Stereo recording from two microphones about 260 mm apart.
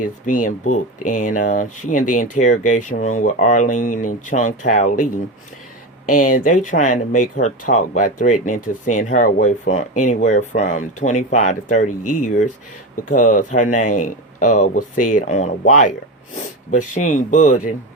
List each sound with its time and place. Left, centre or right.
0.0 s speech: left
11.9 s speech: left
13.1 s speech: left